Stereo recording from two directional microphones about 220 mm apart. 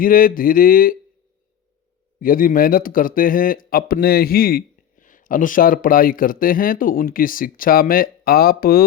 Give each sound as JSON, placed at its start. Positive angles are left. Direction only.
{"t": 0.0, "sound": "speech", "side_deg": 40}
{"t": 2.2, "sound": "speech", "side_deg": 40}